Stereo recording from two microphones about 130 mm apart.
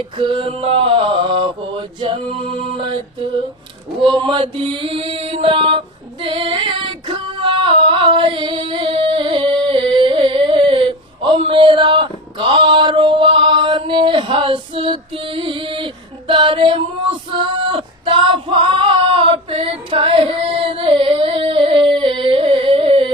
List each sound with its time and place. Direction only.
0.2 s male singing: 40° right (ahead or behind)
4.0 s mantra: 40° right (ahead or behind)
6.2 s female singing: 40° right (ahead or behind)